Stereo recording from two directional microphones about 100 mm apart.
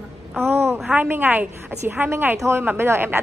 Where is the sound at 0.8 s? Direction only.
15° right (ahead or behind).